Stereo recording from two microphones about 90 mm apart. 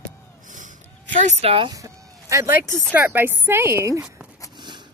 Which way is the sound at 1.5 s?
75° right (ahead or behind).